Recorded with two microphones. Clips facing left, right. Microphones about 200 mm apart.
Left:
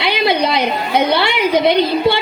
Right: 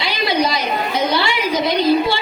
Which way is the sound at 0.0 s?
60° left (ahead or behind).